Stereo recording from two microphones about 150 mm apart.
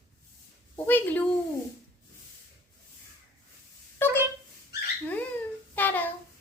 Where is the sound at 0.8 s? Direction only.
10° left (ahead or behind).